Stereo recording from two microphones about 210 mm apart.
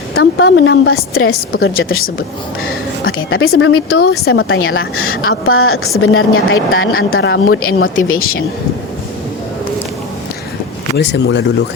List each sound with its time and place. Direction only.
0.1 s a woman's voice: 90° left
1.1 s a woman's voice: 45° left (ahead or behind)
1.7 s speech: 75° left (ahead or behind)
3.1 s speech: 75° left (ahead or behind)
3.6 s a woman's voice: 90° left
3.8 s a woman's voice: 50° left (ahead or behind)
4.1 s a woman's voice: 85° left; by 7.4 s 65° left (ahead or behind)
7.5 s a woman's voice: 80° left
8.2 s a woman's voice: 45° left (ahead or behind)
10.9 s speech: 55° left (ahead or behind)